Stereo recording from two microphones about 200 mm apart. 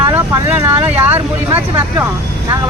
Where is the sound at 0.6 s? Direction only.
10° right (ahead or behind).